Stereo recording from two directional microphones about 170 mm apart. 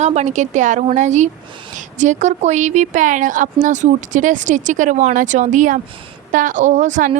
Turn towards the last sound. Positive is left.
turn(degrees=-45)  # may be behind; listen again after turning